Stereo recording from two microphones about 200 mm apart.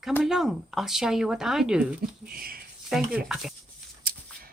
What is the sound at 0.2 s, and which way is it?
Speech, centre (ahead or behind).